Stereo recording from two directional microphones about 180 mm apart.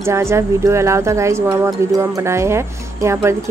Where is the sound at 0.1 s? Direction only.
15° right (ahead or behind).